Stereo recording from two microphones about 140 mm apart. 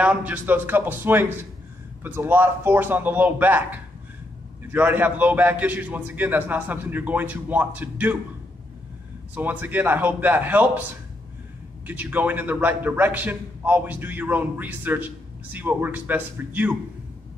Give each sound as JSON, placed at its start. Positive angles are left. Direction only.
{"t": 0.0, "sound": "a man's voice", "side_deg": -10}
{"t": 9.3, "sound": "a man's voice", "side_deg": -10}
{"t": 11.8, "sound": "a man's voice", "side_deg": -10}